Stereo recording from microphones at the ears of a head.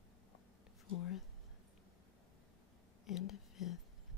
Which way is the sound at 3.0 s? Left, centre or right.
Left.